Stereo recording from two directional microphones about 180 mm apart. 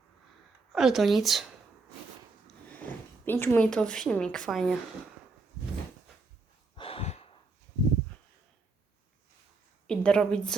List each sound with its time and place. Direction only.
0.7 s a woman's voice: centre (ahead or behind)
3.2 s a woman's voice: 15° left (ahead or behind)
6.7 s a sound: 30° left (ahead or behind)
9.8 s a woman's voice: 5° left (ahead or behind)